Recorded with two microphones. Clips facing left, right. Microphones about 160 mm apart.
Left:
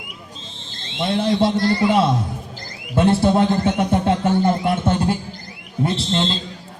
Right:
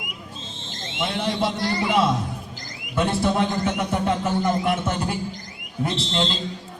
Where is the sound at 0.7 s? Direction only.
30° left (ahead or behind).